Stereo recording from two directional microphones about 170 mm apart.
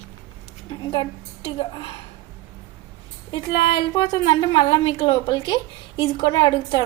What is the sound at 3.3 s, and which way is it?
A woman's voice, 30° left (ahead or behind).